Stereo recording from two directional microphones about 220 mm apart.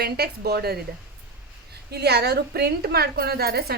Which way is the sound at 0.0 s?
45° right (ahead or behind).